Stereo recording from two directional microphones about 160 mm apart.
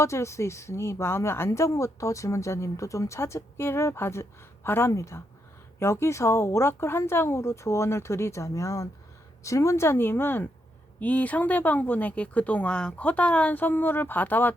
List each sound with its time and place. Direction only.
0.0 s a woman's voice: 20° left (ahead or behind)